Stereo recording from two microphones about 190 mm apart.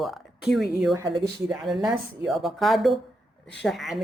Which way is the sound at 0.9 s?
20° right (ahead or behind).